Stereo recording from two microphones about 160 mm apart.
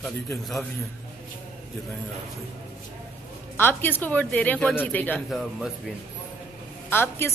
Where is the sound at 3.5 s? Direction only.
15° left (ahead or behind).